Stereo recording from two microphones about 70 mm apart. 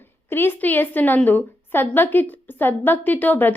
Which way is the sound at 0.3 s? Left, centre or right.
Left.